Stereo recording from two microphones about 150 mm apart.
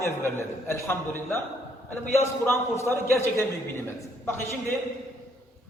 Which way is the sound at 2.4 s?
15° left (ahead or behind).